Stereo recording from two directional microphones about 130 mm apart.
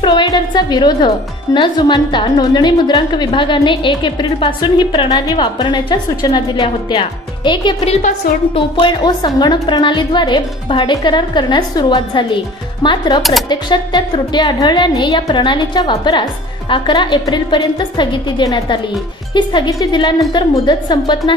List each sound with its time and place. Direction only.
0.0 s a woman's voice: 35° left (ahead or behind)